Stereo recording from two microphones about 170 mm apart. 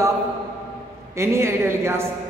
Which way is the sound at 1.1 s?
15° right (ahead or behind).